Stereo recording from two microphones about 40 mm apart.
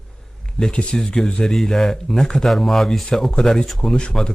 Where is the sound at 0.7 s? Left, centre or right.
Left.